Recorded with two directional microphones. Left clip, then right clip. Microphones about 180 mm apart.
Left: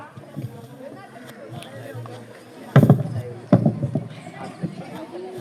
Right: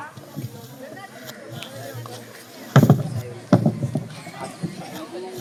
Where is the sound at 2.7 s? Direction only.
20° left (ahead or behind).